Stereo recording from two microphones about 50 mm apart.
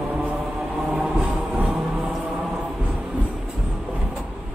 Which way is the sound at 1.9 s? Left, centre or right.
Centre.